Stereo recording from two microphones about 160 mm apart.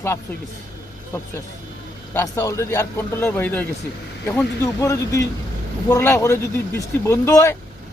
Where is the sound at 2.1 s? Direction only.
15° left (ahead or behind).